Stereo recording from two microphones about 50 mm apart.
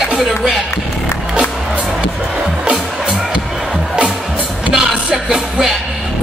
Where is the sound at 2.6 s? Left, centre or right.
Centre.